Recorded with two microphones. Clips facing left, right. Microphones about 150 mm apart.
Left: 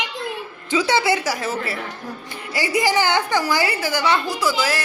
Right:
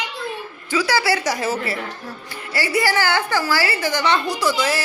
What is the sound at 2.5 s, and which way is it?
A woman's voice, 15° left (ahead or behind).